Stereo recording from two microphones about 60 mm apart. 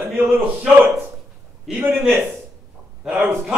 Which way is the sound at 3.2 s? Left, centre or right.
Right.